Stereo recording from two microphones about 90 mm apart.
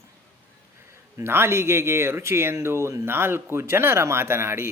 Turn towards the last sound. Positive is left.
turn(degrees=-30)  # may be behind; listen again after turning